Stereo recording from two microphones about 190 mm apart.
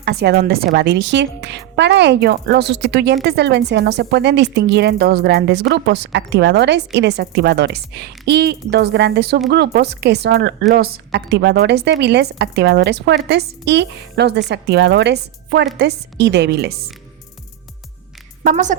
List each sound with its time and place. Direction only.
0.0 s a woman's voice: 60° right (ahead or behind)
18.4 s a woman's voice: 40° right (ahead or behind)